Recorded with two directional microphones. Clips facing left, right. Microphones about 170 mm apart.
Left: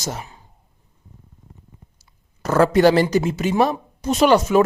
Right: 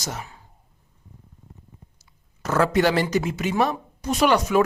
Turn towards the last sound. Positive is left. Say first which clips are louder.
# left 4 dB
turn(degrees=30)  # may be behind; listen again after turning